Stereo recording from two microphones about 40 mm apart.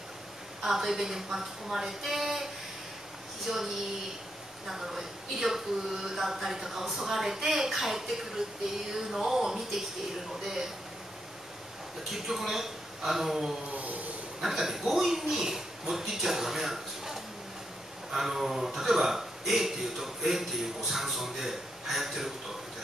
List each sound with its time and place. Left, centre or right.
0.6 s speech: centre
12.0 s speech: centre
13.7 s a sound: right
14.4 s speech: centre